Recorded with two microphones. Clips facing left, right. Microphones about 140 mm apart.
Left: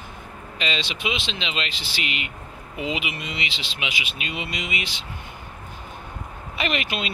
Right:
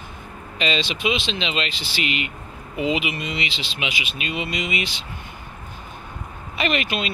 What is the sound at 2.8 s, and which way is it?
Speech, 5° left (ahead or behind).